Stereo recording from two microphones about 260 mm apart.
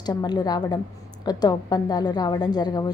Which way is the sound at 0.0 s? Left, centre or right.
Centre.